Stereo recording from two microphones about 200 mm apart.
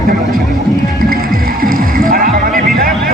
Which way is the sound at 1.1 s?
45° right (ahead or behind).